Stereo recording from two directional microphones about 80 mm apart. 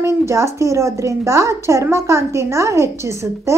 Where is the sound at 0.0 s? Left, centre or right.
Right.